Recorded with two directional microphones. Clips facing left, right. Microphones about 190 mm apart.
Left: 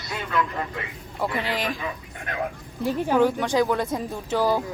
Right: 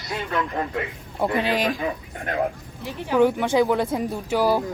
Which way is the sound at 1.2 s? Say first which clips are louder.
Right 5 dB; 15° right (ahead or behind).